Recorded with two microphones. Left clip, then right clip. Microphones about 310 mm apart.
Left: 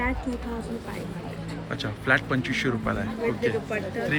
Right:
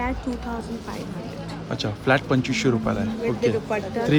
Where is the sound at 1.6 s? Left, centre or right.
Centre.